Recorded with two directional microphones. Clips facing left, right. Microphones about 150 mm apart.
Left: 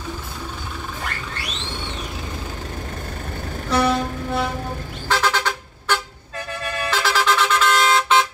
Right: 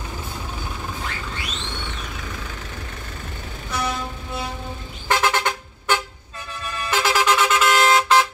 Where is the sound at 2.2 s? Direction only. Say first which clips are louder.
Left 3 dB; 40° left (ahead or behind); by 4.5 s 60° left (ahead or behind).